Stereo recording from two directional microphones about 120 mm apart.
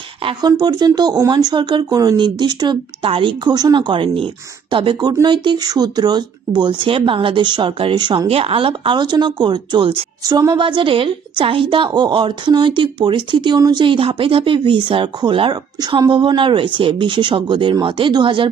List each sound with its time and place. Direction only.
0.6 s a woman's voice: 35° right (ahead or behind)
8.3 s a woman's voice: 50° right (ahead or behind)
10.2 s a woman's voice: 30° right (ahead or behind)